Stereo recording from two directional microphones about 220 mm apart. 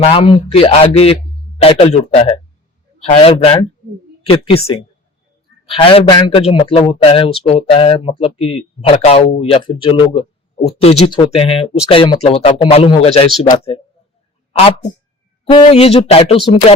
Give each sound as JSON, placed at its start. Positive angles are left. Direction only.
{"t": 0.0, "sound": "a man's voice", "side_deg": 25}
{"t": 15.4, "sound": "a man's voice", "side_deg": 25}